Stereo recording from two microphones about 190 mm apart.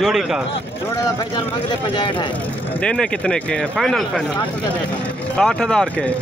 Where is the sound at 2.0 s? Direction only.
25° left (ahead or behind).